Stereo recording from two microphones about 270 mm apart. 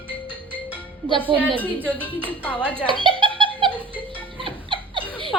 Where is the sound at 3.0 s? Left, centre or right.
Centre.